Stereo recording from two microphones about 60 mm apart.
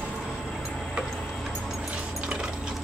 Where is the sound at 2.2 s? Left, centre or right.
Centre.